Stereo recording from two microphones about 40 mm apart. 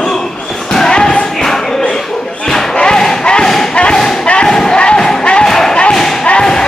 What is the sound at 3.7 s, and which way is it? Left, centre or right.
Thump, left.